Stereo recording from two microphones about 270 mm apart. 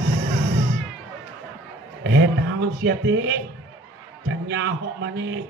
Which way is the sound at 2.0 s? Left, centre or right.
Right.